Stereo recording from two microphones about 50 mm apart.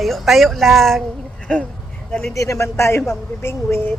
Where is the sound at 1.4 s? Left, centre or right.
Left.